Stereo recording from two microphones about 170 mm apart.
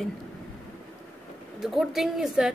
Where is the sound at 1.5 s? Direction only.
Centre (ahead or behind).